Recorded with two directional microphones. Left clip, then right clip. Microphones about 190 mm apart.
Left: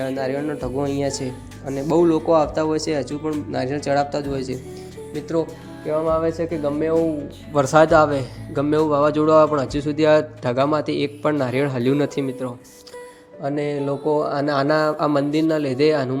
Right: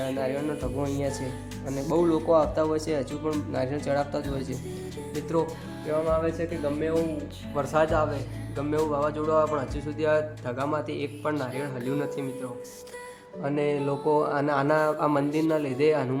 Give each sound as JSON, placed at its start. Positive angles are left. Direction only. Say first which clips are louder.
{"t": 0.2, "sound": "speech", "louder": "left 5 dB", "side_deg": 15}
{"t": 1.6, "sound": "speech", "louder": "left 6 dB", "side_deg": 0}
{"t": 1.9, "sound": "speech", "louder": "left 6 dB", "side_deg": 15}
{"t": 5.9, "sound": "a man's voice", "louder": "left 6 dB", "side_deg": 20}
{"t": 13.4, "sound": "speech", "louder": "left 3 dB", "side_deg": 10}